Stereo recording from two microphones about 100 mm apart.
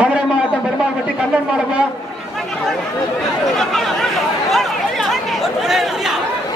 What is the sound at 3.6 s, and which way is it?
Speech, 5° left (ahead or behind).